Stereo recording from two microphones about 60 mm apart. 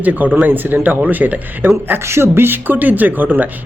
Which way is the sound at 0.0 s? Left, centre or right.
Right.